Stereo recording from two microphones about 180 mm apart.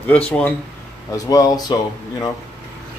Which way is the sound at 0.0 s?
5° left (ahead or behind).